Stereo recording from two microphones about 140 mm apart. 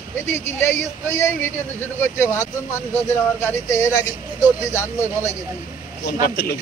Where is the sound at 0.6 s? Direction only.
20° left (ahead or behind).